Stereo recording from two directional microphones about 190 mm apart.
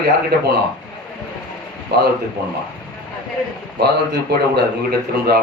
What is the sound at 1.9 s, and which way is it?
Speech, 60° right (ahead or behind).